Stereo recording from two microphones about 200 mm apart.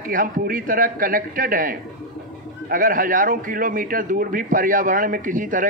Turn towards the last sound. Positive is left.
turn(degrees=-40)  # may be behind; listen again after turning